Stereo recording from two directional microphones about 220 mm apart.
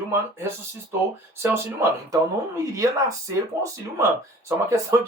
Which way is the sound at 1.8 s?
15° right (ahead or behind).